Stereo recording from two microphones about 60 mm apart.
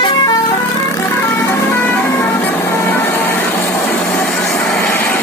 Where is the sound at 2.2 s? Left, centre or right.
Left.